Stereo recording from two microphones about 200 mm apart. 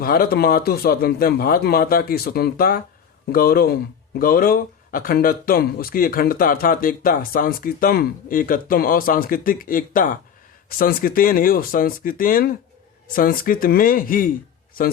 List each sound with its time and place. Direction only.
0.0 s speech: 50° left (ahead or behind)